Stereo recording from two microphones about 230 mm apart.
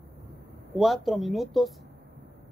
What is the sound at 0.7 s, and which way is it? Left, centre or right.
Speech, centre.